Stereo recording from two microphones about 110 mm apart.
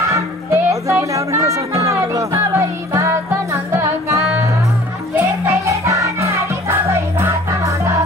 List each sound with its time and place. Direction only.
0.0 s music: 25° right (ahead or behind)